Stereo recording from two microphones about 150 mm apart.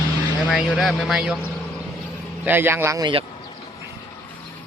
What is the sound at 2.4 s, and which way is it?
Speech, 15° right (ahead or behind).